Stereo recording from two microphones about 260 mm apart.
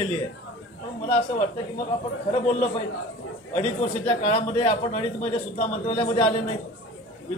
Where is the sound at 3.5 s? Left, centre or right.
Left.